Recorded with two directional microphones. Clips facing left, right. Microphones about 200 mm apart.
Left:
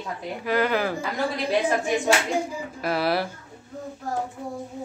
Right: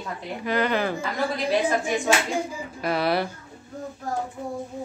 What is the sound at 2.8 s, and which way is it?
Speech, 5° left (ahead or behind).